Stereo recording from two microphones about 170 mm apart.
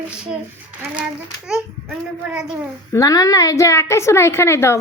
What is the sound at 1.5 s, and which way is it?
A child's voice, 5° right (ahead or behind).